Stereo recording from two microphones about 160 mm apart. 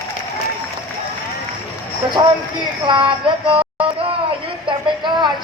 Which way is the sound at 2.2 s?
25° right (ahead or behind).